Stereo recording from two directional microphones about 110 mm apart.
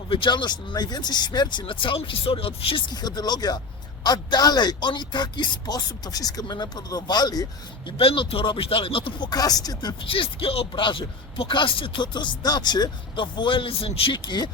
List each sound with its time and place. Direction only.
0.1 s speech: 50° left (ahead or behind)
2.9 s speech: 40° left (ahead or behind)
7.9 s speech: 55° left (ahead or behind); by 9.9 s 35° left (ahead or behind)
10.0 s speech: 50° left (ahead or behind)